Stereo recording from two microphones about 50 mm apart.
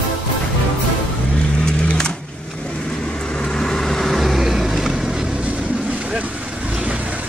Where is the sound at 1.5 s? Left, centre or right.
Centre.